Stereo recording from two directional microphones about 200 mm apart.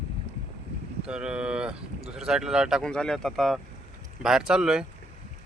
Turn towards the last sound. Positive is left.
turn(degrees=-5)  # may be behind; listen again after turning